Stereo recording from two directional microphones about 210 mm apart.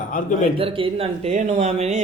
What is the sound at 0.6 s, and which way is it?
Speech, 25° right (ahead or behind).